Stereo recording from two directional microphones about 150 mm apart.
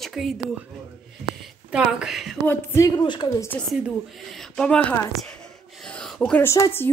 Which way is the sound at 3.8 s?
Centre (ahead or behind).